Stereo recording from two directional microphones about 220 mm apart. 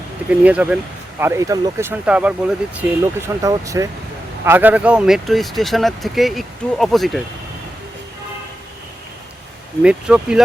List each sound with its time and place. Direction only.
0.3 s speech: 5° right (ahead or behind)
9.8 s speech: 5° right (ahead or behind)